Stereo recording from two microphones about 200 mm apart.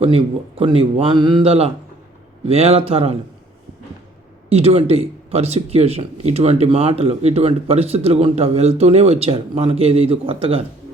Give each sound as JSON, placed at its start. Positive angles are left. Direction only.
{"t": 0.0, "sound": "speech", "side_deg": -30}
{"t": 4.4, "sound": "a man's voice", "side_deg": -30}